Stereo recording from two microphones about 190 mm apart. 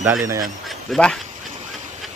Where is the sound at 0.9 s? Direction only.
5° left (ahead or behind).